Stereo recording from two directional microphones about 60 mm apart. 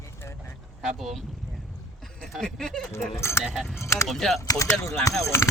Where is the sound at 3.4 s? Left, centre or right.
Centre.